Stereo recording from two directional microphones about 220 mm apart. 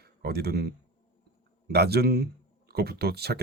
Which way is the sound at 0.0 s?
45° right (ahead or behind).